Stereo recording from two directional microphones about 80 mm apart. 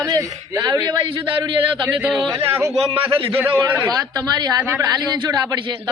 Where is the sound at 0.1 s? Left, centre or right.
Right.